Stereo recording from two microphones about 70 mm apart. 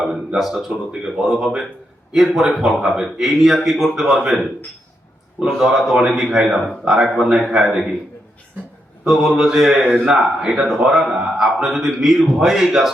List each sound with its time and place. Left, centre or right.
0.3 s speech: centre
9.0 s speech: centre
9.8 s a man's voice: right
10.1 s speech: centre